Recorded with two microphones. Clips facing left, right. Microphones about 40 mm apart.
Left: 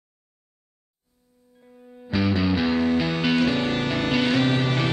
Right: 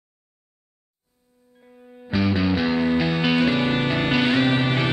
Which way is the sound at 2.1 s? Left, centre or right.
Right.